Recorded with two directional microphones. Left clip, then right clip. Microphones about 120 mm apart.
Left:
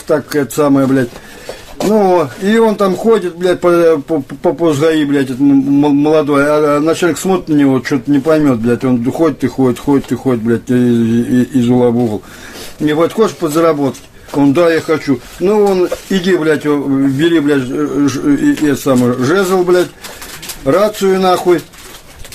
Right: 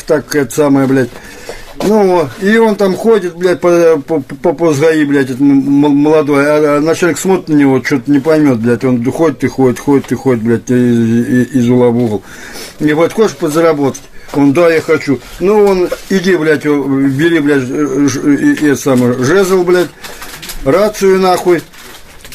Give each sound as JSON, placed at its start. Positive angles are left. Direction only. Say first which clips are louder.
{"t": 0.1, "sound": "a man's voice", "louder": "right 2 dB", "side_deg": 20}